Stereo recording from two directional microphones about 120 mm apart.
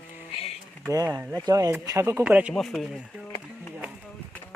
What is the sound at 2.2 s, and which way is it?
Speech, 10° right (ahead or behind).